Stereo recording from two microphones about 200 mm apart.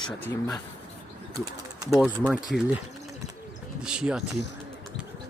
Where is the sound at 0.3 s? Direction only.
15° left (ahead or behind).